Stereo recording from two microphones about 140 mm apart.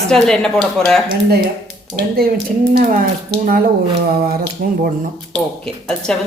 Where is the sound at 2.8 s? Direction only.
75° right (ahead or behind).